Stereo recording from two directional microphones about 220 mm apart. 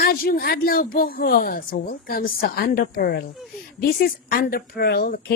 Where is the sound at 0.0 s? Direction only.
45° left (ahead or behind).